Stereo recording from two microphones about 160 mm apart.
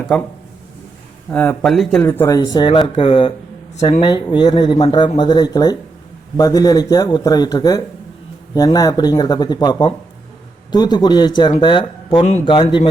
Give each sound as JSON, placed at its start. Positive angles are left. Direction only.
{"t": 0.1, "sound": "speech", "side_deg": 0}
{"t": 1.3, "sound": "speech", "side_deg": 10}
{"t": 2.0, "sound": "speech", "side_deg": 15}